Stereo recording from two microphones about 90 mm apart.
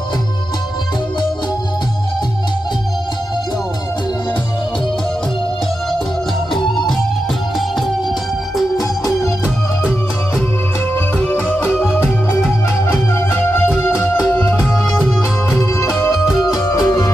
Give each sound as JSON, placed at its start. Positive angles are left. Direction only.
{"t": 8.7, "sound": "organ", "side_deg": 40}
{"t": 11.4, "sound": "music", "side_deg": 20}
{"t": 13.1, "sound": "music", "side_deg": 25}
{"t": 14.6, "sound": "music", "side_deg": 0}